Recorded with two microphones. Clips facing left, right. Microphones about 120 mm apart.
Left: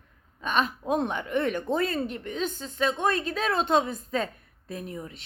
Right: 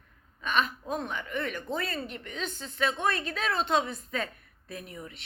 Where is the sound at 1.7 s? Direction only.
45° left (ahead or behind).